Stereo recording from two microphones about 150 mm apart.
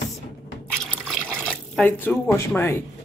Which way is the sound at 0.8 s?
5° left (ahead or behind).